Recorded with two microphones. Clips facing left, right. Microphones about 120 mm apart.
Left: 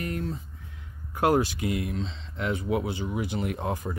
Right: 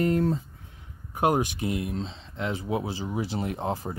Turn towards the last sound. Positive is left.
turn(degrees=-30)  # may be behind; listen again after turning